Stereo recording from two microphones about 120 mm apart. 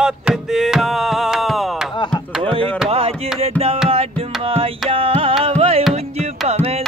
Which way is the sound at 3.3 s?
60° right (ahead or behind).